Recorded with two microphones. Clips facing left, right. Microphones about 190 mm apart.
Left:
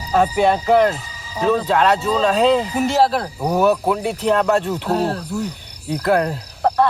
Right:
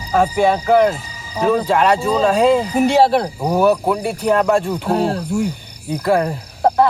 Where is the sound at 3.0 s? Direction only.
25° right (ahead or behind).